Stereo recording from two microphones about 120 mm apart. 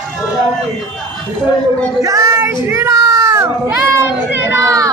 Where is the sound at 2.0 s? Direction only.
25° right (ahead or behind).